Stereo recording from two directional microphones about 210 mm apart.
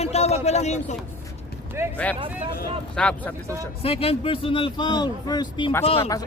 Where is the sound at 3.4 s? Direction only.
15° right (ahead or behind).